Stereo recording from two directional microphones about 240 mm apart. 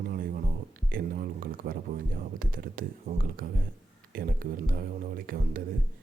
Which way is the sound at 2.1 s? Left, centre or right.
Right.